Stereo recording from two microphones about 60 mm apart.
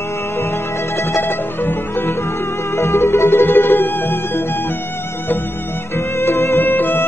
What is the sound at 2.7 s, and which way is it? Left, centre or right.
Music, left.